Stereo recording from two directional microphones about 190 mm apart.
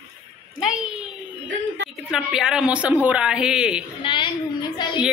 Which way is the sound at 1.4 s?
75° right (ahead or behind).